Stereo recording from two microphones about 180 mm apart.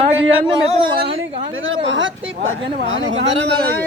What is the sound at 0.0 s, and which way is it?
A woman's voice, 30° right (ahead or behind).